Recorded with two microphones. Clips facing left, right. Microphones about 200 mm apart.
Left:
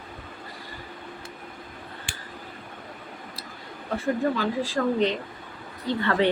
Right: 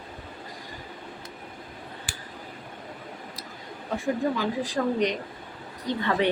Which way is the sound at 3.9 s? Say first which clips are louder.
Left 1 dB; 15° right (ahead or behind).